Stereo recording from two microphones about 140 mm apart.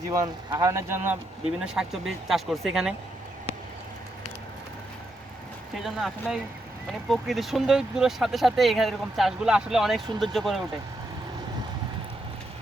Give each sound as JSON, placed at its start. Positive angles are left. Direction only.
{"t": 0.1, "sound": "speech", "side_deg": -25}
{"t": 1.6, "sound": "speech", "side_deg": -5}
{"t": 5.7, "sound": "speech", "side_deg": 0}